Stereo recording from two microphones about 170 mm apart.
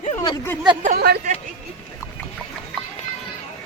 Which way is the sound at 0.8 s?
65° right (ahead or behind).